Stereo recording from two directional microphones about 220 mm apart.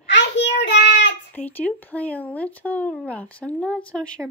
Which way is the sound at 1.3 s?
10° left (ahead or behind).